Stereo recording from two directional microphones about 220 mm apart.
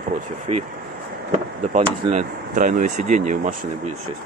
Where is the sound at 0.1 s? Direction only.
30° right (ahead or behind).